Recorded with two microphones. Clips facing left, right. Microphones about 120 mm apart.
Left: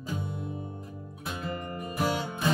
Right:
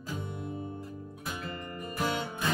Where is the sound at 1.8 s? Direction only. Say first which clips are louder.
Left 3 dB; 10° left (ahead or behind).